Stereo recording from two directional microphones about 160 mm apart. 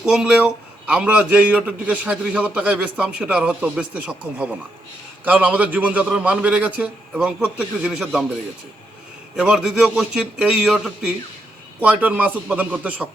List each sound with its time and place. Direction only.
0.0 s a man's voice: 5° right (ahead or behind)
9.3 s a man's voice: 5° right (ahead or behind)